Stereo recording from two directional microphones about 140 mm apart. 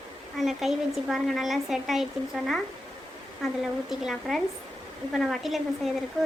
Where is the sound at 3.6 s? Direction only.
Centre (ahead or behind).